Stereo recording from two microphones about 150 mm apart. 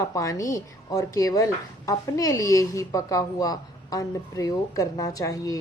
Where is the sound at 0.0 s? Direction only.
20° left (ahead or behind).